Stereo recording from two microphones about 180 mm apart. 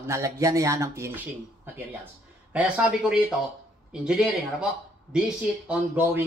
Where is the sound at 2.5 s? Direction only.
10° right (ahead or behind).